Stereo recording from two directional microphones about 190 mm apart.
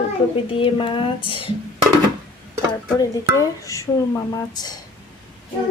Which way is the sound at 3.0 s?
15° left (ahead or behind).